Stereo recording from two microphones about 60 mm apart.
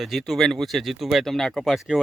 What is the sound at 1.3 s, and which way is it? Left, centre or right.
Speech, centre.